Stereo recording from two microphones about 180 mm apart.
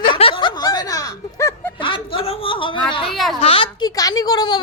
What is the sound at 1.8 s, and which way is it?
Speech, 30° left (ahead or behind).